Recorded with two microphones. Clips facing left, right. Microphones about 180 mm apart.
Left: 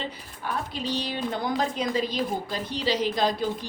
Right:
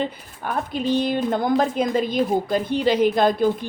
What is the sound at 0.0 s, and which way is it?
Speech, 55° right (ahead or behind).